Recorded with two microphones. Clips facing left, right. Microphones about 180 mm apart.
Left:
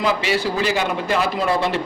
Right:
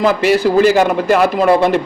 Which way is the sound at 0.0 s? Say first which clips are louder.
Right 8 dB; 45° right (ahead or behind).